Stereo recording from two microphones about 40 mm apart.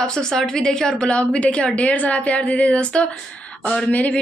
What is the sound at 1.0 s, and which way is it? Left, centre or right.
Speech, left.